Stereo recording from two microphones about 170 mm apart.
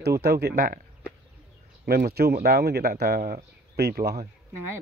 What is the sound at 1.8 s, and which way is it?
Speech, 65° right (ahead or behind).